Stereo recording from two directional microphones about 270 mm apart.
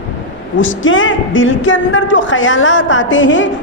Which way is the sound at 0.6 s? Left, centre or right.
Left.